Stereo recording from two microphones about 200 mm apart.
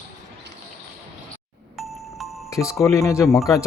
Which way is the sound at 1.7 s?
Centre (ahead or behind).